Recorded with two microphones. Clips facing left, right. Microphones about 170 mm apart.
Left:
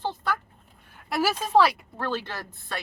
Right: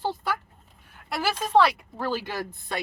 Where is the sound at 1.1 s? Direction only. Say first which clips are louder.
Left 2 dB; 5° left (ahead or behind).